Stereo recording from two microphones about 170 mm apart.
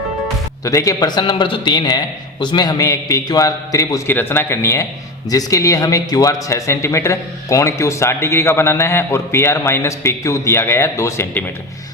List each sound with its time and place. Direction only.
0.6 s a man's voice: 20° left (ahead or behind)